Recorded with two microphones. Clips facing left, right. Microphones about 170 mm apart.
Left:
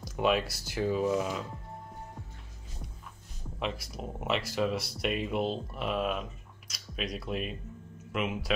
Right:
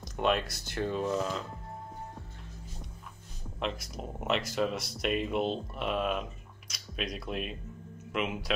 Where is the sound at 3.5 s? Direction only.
Centre (ahead or behind).